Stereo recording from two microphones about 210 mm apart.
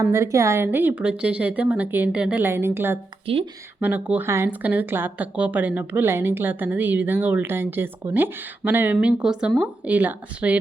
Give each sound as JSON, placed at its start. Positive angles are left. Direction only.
{"t": 0.1, "sound": "speech", "side_deg": -15}
{"t": 3.3, "sound": "speech", "side_deg": -25}
{"t": 3.8, "sound": "speech", "side_deg": -10}